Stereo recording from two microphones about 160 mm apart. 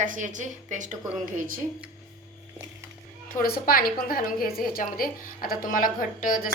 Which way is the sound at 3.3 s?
65° left (ahead or behind).